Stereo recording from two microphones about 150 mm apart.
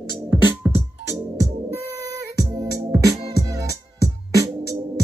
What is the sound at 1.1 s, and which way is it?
Music, 20° right (ahead or behind).